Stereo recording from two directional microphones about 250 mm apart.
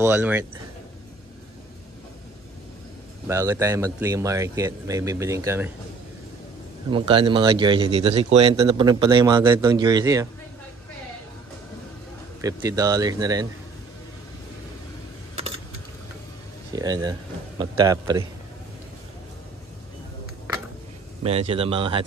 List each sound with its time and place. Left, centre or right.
0.0 s a man's voice: centre
3.3 s a man's voice: centre
6.9 s a man's voice: right
12.4 s a man's voice: centre
15.3 s keys jangling: right
16.7 s a man's voice: centre
21.2 s a man's voice: right